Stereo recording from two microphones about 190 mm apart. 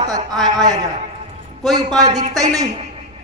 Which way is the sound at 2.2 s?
20° right (ahead or behind).